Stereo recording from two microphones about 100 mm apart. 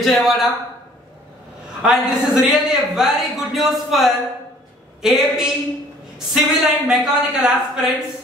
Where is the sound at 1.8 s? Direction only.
5° right (ahead or behind).